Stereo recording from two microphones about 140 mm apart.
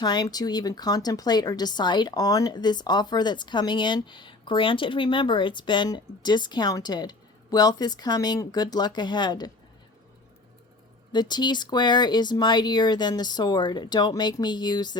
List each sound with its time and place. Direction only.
0.0 s a woman's voice: 30° left (ahead or behind)
11.1 s a woman's voice: 30° left (ahead or behind)